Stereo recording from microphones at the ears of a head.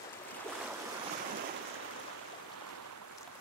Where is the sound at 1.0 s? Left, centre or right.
Right.